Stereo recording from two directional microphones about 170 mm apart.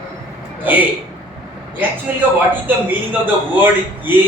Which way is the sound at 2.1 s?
10° right (ahead or behind).